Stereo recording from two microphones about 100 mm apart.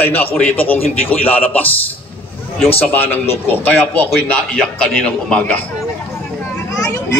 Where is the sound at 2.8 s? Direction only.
20° left (ahead or behind).